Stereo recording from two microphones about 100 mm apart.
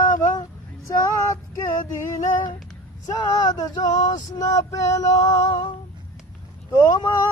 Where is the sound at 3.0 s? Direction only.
40° left (ahead or behind).